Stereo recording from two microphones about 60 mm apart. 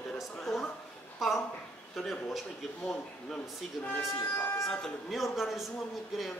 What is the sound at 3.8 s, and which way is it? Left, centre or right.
Speech, centre.